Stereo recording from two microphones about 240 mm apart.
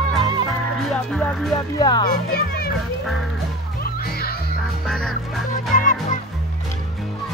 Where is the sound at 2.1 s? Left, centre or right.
Left.